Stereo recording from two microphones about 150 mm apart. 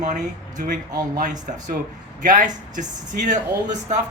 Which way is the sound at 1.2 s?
60° right (ahead or behind).